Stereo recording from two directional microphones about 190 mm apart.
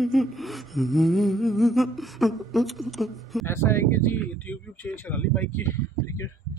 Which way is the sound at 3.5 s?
15° left (ahead or behind).